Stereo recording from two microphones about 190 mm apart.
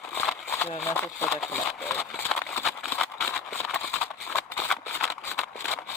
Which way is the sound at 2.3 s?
5° left (ahead or behind).